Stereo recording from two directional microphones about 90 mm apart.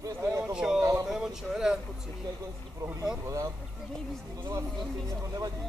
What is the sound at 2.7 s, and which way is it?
Speech, 40° right (ahead or behind).